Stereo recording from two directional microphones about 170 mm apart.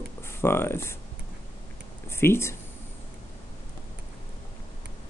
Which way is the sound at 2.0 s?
15° left (ahead or behind).